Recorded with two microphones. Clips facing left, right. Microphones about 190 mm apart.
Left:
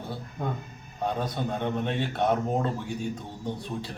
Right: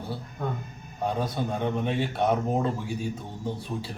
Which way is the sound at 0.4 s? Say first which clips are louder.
Even; 15° left (ahead or behind).